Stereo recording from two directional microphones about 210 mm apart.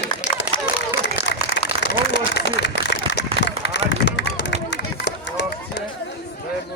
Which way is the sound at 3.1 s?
55° left (ahead or behind).